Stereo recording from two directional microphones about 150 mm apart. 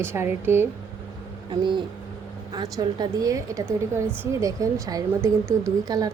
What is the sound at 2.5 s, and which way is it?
A woman's voice, 25° right (ahead or behind).